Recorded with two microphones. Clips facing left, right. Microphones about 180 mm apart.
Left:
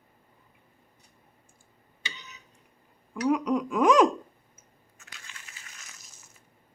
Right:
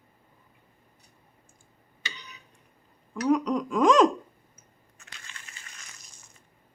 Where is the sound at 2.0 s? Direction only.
25° left (ahead or behind).